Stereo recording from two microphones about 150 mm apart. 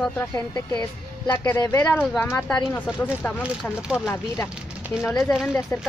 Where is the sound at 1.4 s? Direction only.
15° left (ahead or behind).